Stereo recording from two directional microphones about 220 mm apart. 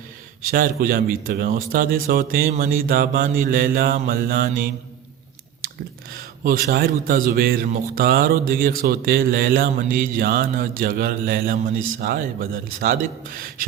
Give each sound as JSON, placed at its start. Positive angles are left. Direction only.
{"t": 0.4, "sound": "speech", "side_deg": -40}
{"t": 6.4, "sound": "speech", "side_deg": -40}